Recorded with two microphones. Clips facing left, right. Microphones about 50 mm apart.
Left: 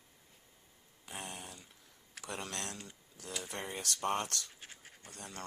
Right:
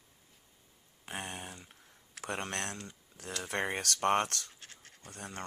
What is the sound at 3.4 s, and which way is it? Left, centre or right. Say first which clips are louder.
Speech: right 9 dB; right.